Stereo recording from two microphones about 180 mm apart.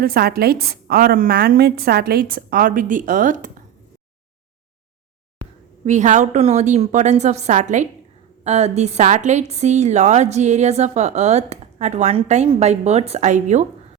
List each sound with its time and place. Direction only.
0.0 s a woman's voice: 55° right (ahead or behind)
5.8 s a woman's voice: 40° right (ahead or behind)